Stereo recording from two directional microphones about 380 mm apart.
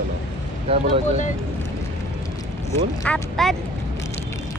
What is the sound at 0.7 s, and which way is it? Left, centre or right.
Speech, centre.